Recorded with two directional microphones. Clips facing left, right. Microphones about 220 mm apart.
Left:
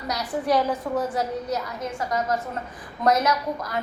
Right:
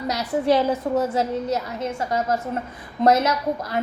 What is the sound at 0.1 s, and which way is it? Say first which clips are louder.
A woman's voice: right 3 dB; 25° right (ahead or behind).